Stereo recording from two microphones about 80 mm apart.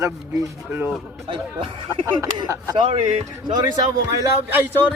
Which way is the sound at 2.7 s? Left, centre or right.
Right.